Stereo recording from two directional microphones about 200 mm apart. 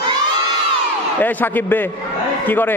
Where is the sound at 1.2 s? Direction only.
10° left (ahead or behind).